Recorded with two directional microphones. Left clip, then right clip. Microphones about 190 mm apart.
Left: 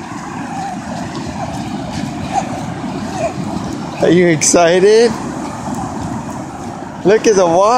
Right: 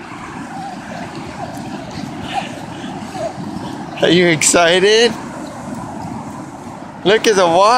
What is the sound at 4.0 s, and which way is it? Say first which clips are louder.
Speech: left 1 dB; 15° left (ahead or behind).